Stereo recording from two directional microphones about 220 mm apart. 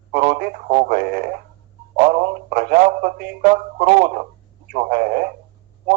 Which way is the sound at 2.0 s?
40° right (ahead or behind).